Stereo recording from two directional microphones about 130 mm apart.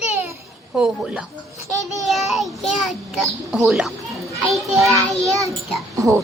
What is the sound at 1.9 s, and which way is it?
A child's voice, centre (ahead or behind).